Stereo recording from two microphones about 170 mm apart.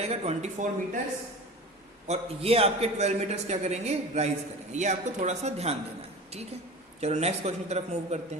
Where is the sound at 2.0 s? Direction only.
35° right (ahead or behind).